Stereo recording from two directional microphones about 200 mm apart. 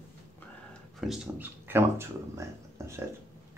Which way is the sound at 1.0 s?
Centre (ahead or behind).